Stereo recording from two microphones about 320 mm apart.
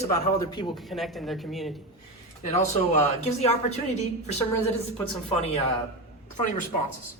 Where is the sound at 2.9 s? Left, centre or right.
Left.